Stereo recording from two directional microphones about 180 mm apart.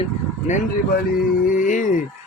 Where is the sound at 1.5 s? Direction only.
45° left (ahead or behind).